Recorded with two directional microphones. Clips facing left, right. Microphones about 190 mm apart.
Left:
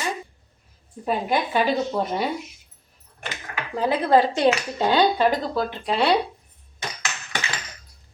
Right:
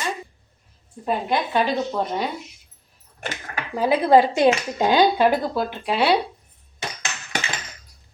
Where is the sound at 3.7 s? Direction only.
10° right (ahead or behind).